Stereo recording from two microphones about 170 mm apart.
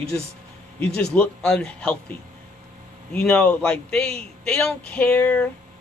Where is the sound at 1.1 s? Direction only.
5° left (ahead or behind).